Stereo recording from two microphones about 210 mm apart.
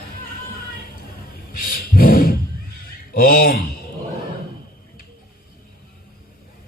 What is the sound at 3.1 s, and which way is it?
Speech, 45° left (ahead or behind).